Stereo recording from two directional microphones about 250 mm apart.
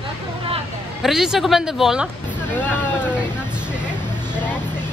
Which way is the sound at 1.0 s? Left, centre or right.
Centre.